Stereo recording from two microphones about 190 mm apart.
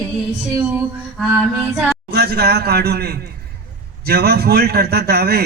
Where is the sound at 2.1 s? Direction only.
60° right (ahead or behind).